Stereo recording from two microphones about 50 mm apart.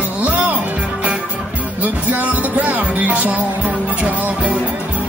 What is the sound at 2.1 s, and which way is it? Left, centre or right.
Music, right.